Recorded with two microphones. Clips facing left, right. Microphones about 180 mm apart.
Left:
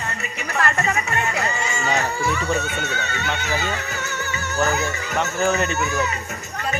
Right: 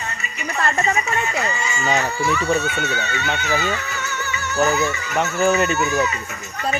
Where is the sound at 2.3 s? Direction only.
50° left (ahead or behind).